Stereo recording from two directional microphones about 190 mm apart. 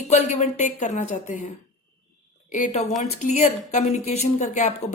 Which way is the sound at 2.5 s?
40° left (ahead or behind).